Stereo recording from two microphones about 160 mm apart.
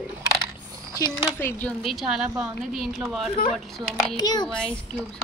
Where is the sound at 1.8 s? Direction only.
Centre (ahead or behind).